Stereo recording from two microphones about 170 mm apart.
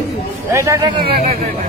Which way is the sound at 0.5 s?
20° right (ahead or behind).